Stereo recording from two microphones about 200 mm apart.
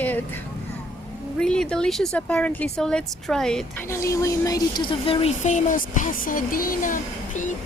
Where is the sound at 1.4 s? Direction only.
5° left (ahead or behind).